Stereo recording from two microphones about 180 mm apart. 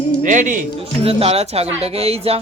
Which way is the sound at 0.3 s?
45° right (ahead or behind).